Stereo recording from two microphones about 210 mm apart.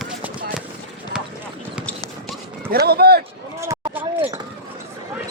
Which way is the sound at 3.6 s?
15° right (ahead or behind).